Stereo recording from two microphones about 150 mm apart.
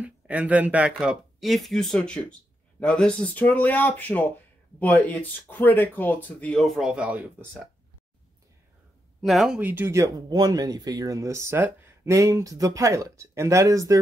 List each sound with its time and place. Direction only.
0.0 s speech: 10° right (ahead or behind)
9.2 s speech: centre (ahead or behind)
9.6 s speech: 15° right (ahead or behind)